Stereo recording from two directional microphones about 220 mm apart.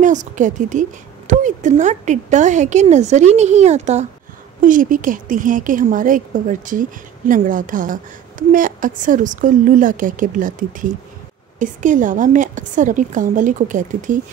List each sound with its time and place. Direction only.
0.0 s speech: 35° right (ahead or behind)